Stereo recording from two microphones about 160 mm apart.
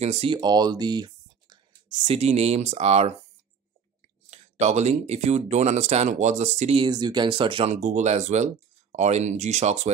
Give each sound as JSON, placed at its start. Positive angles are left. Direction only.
{"t": 0.0, "sound": "speech", "side_deg": -40}
{"t": 2.1, "sound": "speech", "side_deg": -40}
{"t": 4.3, "sound": "speech", "side_deg": -45}
{"t": 6.8, "sound": "speech", "side_deg": -25}
{"t": 7.7, "sound": "speech", "side_deg": -45}